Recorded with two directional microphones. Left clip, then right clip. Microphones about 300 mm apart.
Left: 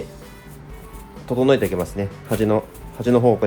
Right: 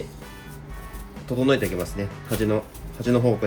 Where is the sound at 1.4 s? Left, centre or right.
Left.